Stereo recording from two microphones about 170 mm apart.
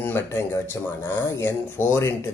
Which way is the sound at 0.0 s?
15° left (ahead or behind).